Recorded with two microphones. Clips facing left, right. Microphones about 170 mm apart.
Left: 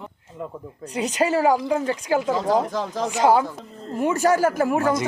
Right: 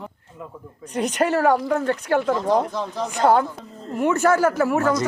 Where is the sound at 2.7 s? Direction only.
90° left.